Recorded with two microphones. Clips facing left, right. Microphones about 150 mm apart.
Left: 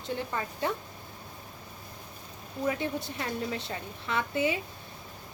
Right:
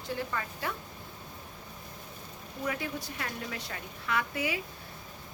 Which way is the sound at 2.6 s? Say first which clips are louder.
Left 4 dB; 25° left (ahead or behind).